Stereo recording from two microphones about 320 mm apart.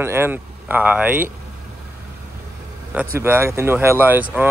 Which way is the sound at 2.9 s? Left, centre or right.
Centre.